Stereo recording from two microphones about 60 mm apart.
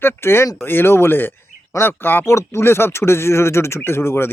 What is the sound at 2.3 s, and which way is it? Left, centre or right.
Speech, left.